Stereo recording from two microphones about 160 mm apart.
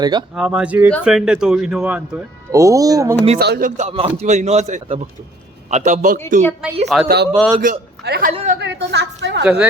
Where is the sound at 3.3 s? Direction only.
85° right.